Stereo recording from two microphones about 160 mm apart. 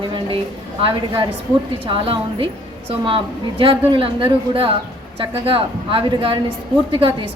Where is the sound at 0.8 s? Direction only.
30° right (ahead or behind).